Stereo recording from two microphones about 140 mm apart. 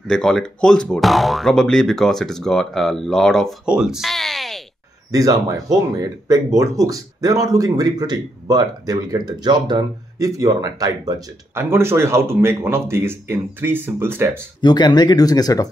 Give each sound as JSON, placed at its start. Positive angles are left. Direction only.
{"t": 0.1, "sound": "speech", "side_deg": 5}
{"t": 5.1, "sound": "speech", "side_deg": -25}
{"t": 14.6, "sound": "speech", "side_deg": 30}